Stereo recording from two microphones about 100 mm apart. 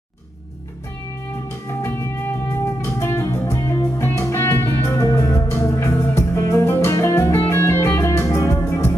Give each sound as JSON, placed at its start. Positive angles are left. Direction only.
{"t": 1.8, "sound": "music", "side_deg": 25}